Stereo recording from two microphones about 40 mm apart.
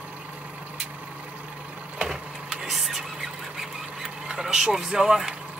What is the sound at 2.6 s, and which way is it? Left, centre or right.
Speech, centre.